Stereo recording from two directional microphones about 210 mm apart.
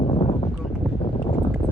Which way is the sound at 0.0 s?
25° left (ahead or behind).